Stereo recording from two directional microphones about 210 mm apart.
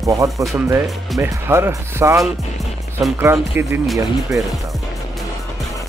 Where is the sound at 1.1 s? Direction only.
15° right (ahead or behind).